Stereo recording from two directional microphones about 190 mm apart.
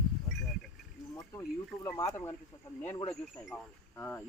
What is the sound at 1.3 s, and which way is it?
Speech, 20° left (ahead or behind).